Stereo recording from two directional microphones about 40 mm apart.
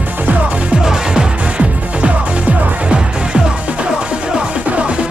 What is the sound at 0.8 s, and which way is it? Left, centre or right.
Music, centre.